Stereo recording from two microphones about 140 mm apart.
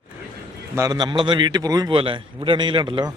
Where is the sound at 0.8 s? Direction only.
25° right (ahead or behind).